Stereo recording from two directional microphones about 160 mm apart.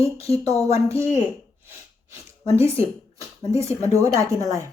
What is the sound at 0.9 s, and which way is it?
Speech, 20° right (ahead or behind).